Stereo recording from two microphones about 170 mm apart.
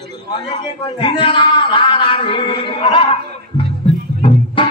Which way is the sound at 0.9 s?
30° left (ahead or behind).